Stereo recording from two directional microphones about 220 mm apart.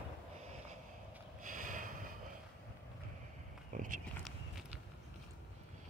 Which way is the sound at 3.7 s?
35° right (ahead or behind).